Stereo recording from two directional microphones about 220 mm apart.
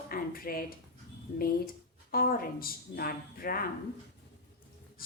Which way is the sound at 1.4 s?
40° left (ahead or behind).